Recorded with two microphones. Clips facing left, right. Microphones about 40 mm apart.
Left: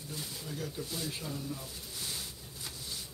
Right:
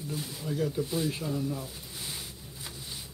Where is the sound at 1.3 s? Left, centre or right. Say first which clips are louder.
Right 7 dB; centre.